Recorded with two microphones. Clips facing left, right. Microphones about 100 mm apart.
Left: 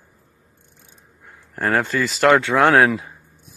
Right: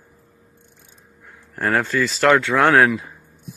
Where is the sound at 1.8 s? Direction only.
15° left (ahead or behind).